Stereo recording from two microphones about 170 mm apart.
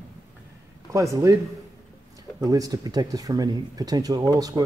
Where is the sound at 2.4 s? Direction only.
20° right (ahead or behind).